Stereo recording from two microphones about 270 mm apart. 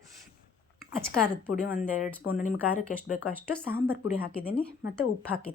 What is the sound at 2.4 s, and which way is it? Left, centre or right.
Speech, left.